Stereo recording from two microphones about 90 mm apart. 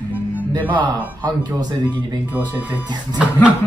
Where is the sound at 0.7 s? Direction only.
55° right (ahead or behind).